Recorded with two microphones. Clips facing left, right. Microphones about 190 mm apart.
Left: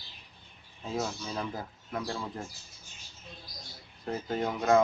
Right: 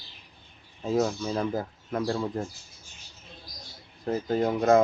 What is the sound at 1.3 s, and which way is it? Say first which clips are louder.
Speech: right 7 dB; 45° right (ahead or behind).